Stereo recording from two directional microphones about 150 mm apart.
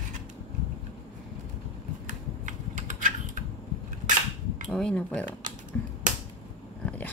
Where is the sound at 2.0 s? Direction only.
60° right (ahead or behind).